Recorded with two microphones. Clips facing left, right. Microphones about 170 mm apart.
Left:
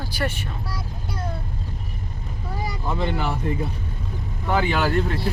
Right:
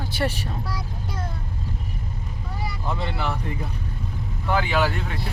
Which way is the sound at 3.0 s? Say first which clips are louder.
Left 7 dB; 40° left (ahead or behind).